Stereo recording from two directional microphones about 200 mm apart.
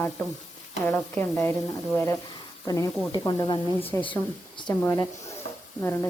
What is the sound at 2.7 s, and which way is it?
A woman's voice, 15° left (ahead or behind).